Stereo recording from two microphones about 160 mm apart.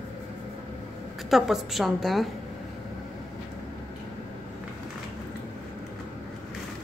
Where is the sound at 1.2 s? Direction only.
Centre (ahead or behind).